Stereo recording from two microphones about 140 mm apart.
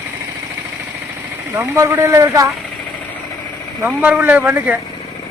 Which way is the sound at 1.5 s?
20° right (ahead or behind).